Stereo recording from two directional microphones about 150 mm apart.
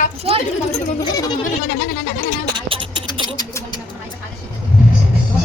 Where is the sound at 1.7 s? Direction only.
60° left (ahead or behind).